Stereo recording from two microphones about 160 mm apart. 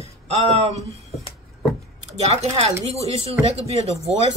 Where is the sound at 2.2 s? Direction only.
40° right (ahead or behind).